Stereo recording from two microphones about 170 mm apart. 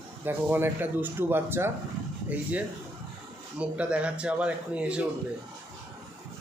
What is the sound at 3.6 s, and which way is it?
Speech, 5° right (ahead or behind).